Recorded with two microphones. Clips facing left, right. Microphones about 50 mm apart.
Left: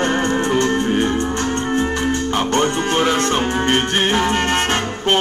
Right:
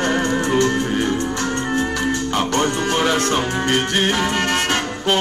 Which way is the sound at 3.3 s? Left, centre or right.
Left.